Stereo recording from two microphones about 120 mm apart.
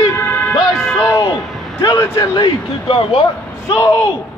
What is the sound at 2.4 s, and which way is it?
Speech, 45° left (ahead or behind).